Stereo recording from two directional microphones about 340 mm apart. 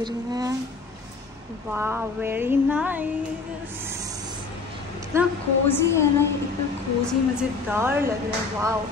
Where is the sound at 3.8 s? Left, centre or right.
Centre.